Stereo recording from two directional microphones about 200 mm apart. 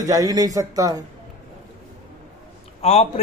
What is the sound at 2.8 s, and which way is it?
Speech, 30° left (ahead or behind).